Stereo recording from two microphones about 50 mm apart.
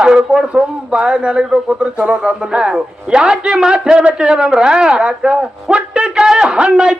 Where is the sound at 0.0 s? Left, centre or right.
Centre.